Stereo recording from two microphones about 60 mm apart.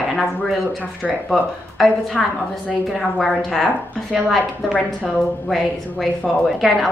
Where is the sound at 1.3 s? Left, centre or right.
Centre.